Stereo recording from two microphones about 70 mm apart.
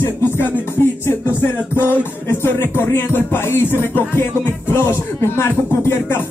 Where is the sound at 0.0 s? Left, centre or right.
Left.